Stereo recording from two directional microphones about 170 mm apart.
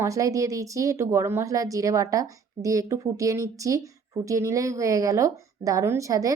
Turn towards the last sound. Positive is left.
turn(degrees=-20)  # may be behind; listen again after turning